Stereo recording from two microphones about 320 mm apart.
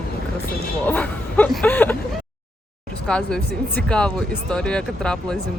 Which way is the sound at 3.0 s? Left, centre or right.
Centre.